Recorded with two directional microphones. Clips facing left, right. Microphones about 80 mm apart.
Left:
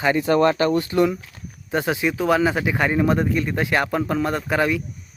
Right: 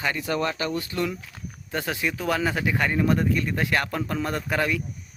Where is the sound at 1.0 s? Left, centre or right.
Centre.